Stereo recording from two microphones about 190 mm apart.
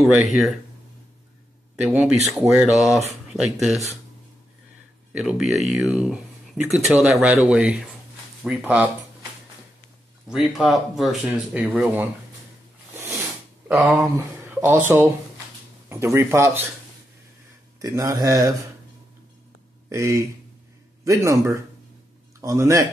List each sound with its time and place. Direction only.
0.3 s speech: centre (ahead or behind)
1.8 s speech: 10° right (ahead or behind)
5.1 s speech: centre (ahead or behind)
10.2 s speech: centre (ahead or behind)
13.7 s speech: centre (ahead or behind)
14.0 s speech: 10° right (ahead or behind)
17.7 s speech: 15° right (ahead or behind)
19.9 s speech: 15° right (ahead or behind)